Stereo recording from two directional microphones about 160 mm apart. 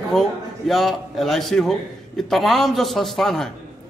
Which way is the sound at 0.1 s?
Centre (ahead or behind).